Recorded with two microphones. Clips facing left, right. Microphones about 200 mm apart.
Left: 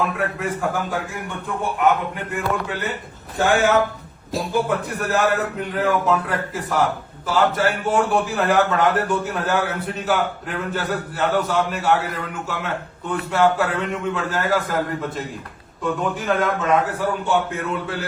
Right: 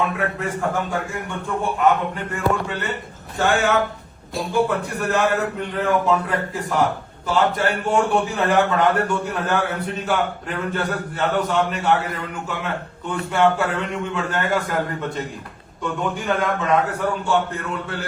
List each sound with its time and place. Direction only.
0.0 s speech: centre (ahead or behind)